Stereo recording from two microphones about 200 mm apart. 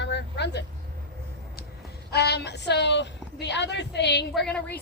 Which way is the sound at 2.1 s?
55° left (ahead or behind).